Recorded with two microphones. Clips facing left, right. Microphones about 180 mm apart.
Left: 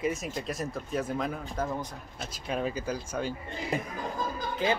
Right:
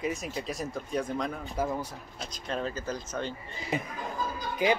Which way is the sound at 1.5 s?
10° right (ahead or behind).